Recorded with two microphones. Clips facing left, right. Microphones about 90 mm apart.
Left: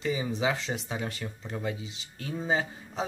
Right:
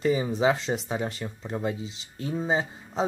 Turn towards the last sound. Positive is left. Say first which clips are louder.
# right 3 dB
turn(degrees=-30)  # may be behind; listen again after turning